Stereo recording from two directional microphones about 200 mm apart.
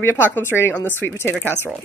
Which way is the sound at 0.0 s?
10° left (ahead or behind).